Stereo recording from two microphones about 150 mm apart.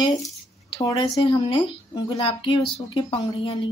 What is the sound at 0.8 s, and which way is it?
Speech, 20° left (ahead or behind).